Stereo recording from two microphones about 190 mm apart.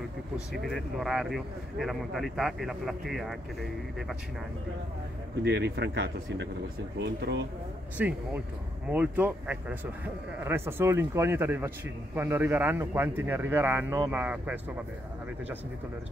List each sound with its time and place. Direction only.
0.7 s speech: centre (ahead or behind)
5.4 s speech: 65° right (ahead or behind)
8.0 s speech: 10° right (ahead or behind)